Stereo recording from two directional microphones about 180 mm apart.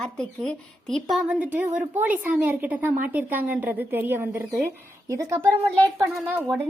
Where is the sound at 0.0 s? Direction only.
5° left (ahead or behind); by 5.5 s 15° right (ahead or behind).